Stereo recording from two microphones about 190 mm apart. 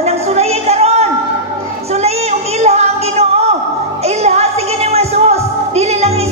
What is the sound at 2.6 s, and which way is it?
Music, 35° right (ahead or behind).